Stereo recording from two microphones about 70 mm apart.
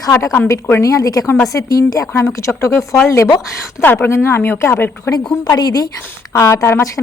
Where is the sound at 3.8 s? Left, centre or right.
Left.